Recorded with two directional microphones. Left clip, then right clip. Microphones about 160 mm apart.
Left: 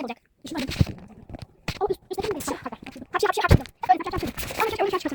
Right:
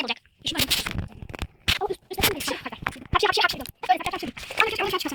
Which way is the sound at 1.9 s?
40° left (ahead or behind).